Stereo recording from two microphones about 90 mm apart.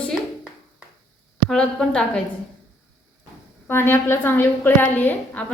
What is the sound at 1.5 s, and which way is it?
Speech, 10° left (ahead or behind).